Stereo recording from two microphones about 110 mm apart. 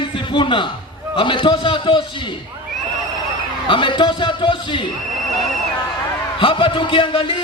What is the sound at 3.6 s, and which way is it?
A man's voice, 50° left (ahead or behind).